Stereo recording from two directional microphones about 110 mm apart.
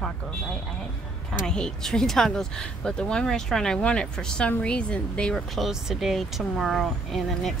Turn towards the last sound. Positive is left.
turn(degrees=0)  # may be behind; listen again after turning